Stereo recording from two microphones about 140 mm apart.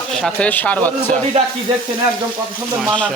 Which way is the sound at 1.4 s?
45° right (ahead or behind).